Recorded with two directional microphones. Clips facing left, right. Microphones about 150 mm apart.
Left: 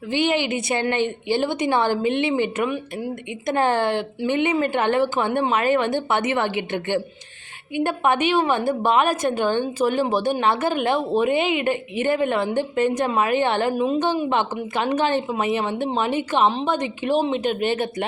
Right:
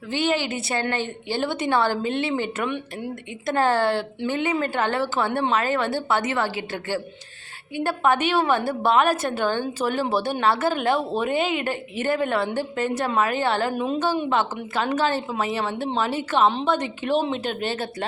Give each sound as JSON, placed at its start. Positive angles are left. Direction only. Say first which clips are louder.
{"t": 0.1, "sound": "a woman's voice", "louder": "left 2 dB", "side_deg": 15}
{"t": 2.6, "sound": "speech", "louder": "left 2 dB", "side_deg": 5}
{"t": 3.4, "sound": "a woman's voice", "louder": "even", "side_deg": 15}
{"t": 13.7, "sound": "speech", "louder": "left 4 dB", "side_deg": 0}
{"t": 14.3, "sound": "a woman's voice", "louder": "left 1 dB", "side_deg": 15}